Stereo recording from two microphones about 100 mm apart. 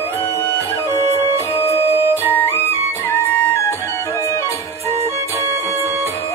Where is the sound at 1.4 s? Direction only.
25° left (ahead or behind).